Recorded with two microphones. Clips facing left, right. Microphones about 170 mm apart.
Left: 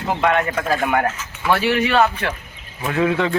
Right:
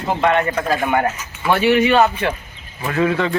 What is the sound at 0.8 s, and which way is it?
Speech, centre (ahead or behind).